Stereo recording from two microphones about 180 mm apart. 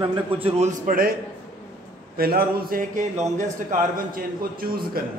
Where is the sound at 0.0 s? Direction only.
30° right (ahead or behind).